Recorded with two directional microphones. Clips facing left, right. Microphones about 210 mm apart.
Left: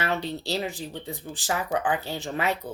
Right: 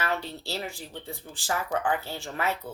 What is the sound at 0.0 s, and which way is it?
Speech, 15° left (ahead or behind).